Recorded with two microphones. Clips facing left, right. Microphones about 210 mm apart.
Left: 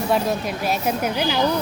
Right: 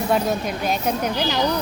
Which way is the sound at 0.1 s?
Centre (ahead or behind).